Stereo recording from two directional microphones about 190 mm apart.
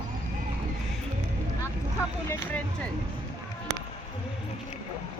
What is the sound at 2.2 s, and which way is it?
Speech, 10° left (ahead or behind).